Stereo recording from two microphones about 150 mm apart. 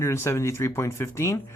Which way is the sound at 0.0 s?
15° left (ahead or behind).